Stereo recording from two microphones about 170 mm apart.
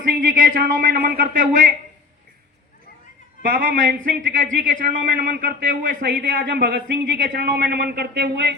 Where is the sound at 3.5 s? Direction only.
55° right (ahead or behind).